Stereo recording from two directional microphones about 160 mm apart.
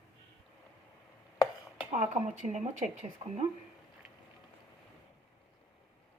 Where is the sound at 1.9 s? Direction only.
45° right (ahead or behind).